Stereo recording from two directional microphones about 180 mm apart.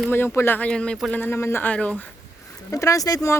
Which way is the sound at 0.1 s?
10° left (ahead or behind).